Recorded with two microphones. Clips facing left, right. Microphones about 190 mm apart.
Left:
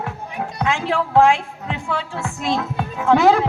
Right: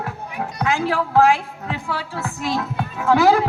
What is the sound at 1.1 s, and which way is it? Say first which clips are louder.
A man's voice: left 1 dB; 25° left (ahead or behind).